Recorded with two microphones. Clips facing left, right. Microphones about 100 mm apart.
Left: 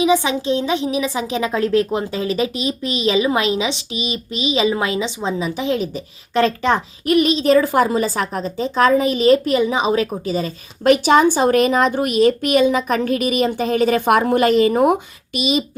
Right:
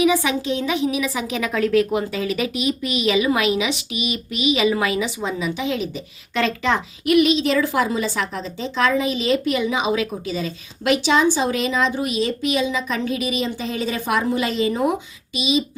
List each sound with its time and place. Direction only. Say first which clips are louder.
0.0 s a woman's voice: left 2 dB; 25° left (ahead or behind); by 15.6 s 55° left (ahead or behind)